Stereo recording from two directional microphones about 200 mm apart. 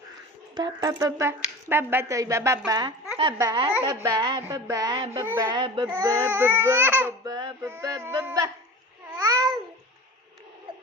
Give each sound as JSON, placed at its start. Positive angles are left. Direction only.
{"t": 0.5, "sound": "a woman's voice", "side_deg": -20}
{"t": 5.5, "sound": "a woman's voice", "side_deg": -25}